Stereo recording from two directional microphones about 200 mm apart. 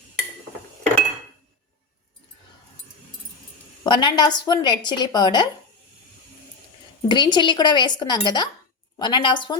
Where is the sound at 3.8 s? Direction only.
20° left (ahead or behind).